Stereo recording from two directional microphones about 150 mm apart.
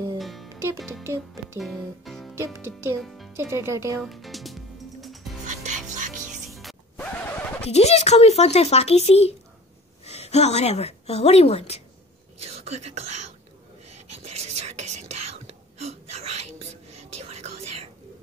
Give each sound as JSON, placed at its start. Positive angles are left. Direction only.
{"t": 0.2, "sound": "music", "side_deg": 0}
{"t": 1.6, "sound": "speech", "side_deg": 0}
{"t": 2.3, "sound": "a child's voice", "side_deg": -15}
{"t": 3.0, "sound": "a child's voice", "side_deg": 0}
{"t": 3.3, "sound": "a child's voice", "side_deg": -15}
{"t": 4.0, "sound": "music", "side_deg": 0}
{"t": 5.5, "sound": "music", "side_deg": -55}
{"t": 6.5, "sound": "music", "side_deg": 0}
{"t": 7.6, "sound": "a woman's voice", "side_deg": 45}
{"t": 12.4, "sound": "whispering", "side_deg": -45}